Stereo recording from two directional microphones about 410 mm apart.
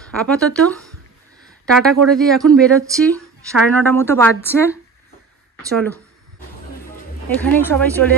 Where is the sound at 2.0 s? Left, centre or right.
Centre.